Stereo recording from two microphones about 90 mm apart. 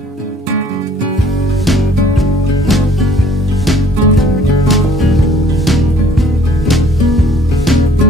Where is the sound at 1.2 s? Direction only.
Centre (ahead or behind).